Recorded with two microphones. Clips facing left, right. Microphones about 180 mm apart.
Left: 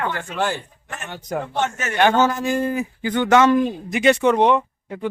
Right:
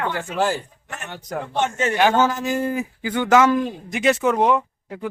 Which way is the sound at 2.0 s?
5° right (ahead or behind).